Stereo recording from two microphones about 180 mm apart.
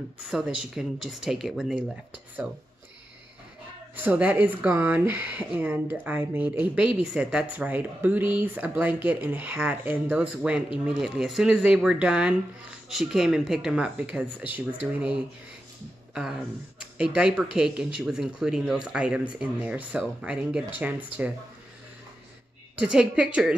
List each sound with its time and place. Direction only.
0.2 s speech: 5° right (ahead or behind)
3.9 s speech: 10° right (ahead or behind)
16.8 s speech: 5° right (ahead or behind)
22.8 s speech: 5° right (ahead or behind)